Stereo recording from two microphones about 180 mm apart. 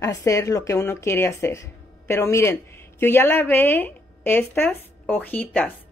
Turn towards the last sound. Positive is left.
turn(degrees=10)  # may be behind; listen again after turning